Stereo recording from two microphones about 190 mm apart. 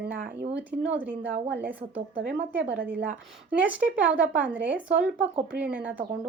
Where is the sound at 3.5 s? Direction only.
10° right (ahead or behind).